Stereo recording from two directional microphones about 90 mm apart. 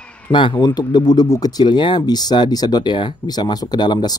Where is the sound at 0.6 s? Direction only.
45° left (ahead or behind).